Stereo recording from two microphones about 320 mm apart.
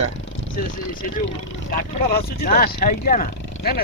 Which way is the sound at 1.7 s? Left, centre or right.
Left.